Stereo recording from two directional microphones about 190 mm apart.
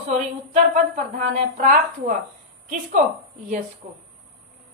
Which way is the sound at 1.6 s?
45° right (ahead or behind).